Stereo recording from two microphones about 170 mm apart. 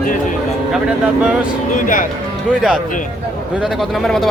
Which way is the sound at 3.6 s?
Centre (ahead or behind).